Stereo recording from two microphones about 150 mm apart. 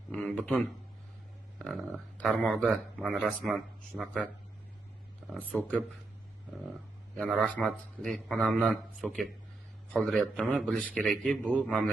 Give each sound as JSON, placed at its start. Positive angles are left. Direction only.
{"t": 0.1, "sound": "a sound", "side_deg": 5}
{"t": 1.5, "sound": "speech", "side_deg": 0}
{"t": 5.5, "sound": "speech", "side_deg": 10}
{"t": 7.3, "sound": "speech", "side_deg": 5}